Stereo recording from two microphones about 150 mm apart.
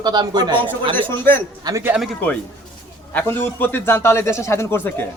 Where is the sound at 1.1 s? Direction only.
15° left (ahead or behind).